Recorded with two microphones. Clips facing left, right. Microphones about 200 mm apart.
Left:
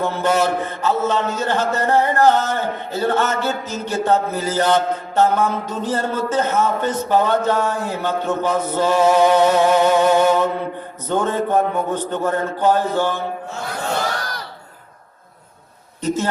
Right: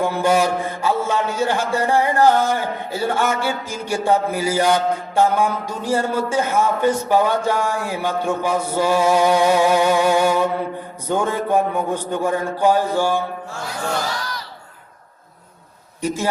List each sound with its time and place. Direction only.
0.0 s a man's voice: 10° right (ahead or behind)
13.7 s battle cry: 55° left (ahead or behind)
16.0 s a man's voice: 10° right (ahead or behind)